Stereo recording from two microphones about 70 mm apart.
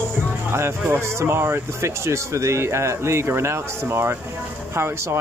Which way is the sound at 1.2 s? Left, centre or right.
Right.